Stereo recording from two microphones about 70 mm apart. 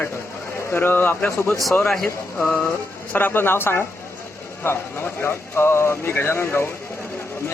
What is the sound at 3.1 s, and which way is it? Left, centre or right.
Speech, left.